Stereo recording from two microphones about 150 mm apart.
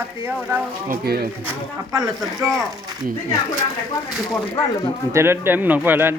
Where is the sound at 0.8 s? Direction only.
90° right.